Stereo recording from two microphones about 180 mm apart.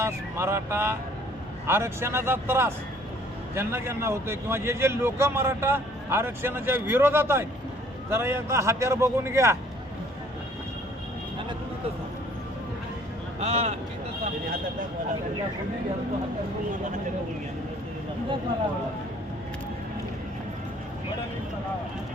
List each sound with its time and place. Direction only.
0.0 s a man's voice: 15° right (ahead or behind)
13.4 s speech: 35° right (ahead or behind)